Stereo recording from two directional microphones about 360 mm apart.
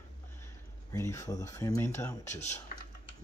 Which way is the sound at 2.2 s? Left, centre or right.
Centre.